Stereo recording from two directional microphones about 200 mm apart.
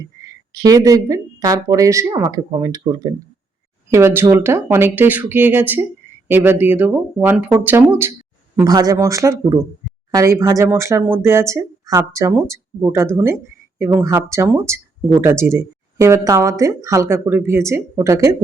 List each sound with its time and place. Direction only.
0.2 s speech: 15° right (ahead or behind)